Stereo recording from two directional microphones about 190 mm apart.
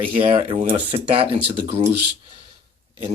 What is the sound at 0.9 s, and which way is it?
Speech, 30° right (ahead or behind).